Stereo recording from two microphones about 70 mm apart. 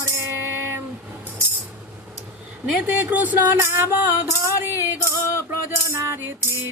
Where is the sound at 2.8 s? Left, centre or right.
Right.